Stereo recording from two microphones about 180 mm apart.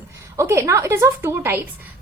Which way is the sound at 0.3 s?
15° right (ahead or behind).